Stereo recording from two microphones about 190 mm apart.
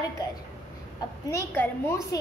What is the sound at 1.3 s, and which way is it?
Speech, 10° left (ahead or behind).